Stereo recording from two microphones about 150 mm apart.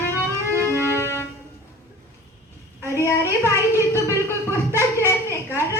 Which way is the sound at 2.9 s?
20° left (ahead or behind).